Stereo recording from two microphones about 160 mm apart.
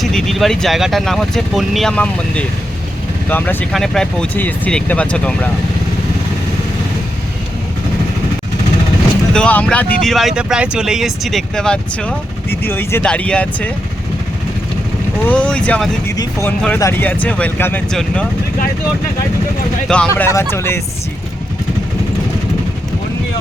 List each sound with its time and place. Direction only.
0.0 s speech: 5° left (ahead or behind)
9.3 s speech: 10° left (ahead or behind)
15.2 s speech: 10° left (ahead or behind)
19.9 s speech: 5° left (ahead or behind)